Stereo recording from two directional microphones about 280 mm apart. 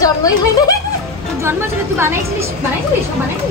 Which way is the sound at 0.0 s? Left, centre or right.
Centre.